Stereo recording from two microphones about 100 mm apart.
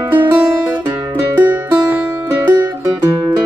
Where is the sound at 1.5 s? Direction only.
20° right (ahead or behind).